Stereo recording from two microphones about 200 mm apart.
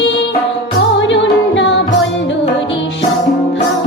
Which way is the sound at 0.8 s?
65° left (ahead or behind).